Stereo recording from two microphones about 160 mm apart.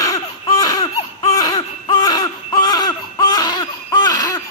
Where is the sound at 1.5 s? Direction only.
30° left (ahead or behind).